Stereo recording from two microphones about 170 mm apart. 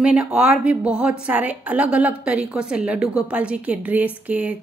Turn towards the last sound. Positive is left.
turn(degrees=-10)  # may be behind; listen again after turning